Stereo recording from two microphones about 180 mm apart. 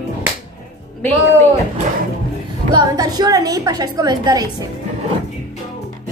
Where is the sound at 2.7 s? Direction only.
20° right (ahead or behind).